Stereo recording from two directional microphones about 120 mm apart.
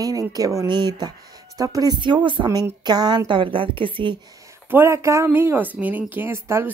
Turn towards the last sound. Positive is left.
turn(degrees=-20)  # may be behind; listen again after turning